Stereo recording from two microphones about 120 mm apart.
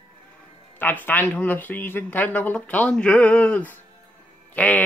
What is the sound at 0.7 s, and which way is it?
Speech, 15° left (ahead or behind).